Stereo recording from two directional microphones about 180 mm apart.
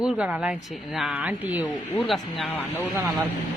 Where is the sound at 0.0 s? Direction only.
5° right (ahead or behind).